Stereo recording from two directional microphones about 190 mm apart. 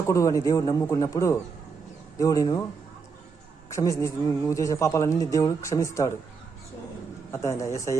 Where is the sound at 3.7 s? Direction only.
15° left (ahead or behind).